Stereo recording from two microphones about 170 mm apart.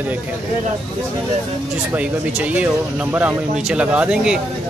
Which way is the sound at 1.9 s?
10° right (ahead or behind).